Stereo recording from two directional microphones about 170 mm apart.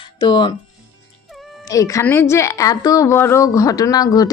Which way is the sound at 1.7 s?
20° left (ahead or behind).